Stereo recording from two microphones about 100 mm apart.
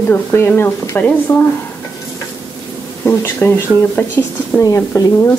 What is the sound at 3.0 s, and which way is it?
Speech, 25° left (ahead or behind).